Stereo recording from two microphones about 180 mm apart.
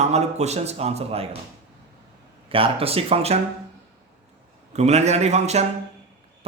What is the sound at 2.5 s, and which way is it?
Speech, 30° right (ahead or behind).